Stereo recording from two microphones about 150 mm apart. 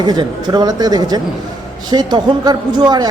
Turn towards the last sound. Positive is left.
turn(degrees=-25)  # may be behind; listen again after turning